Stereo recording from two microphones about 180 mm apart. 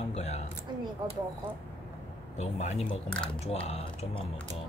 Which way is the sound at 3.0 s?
5° left (ahead or behind).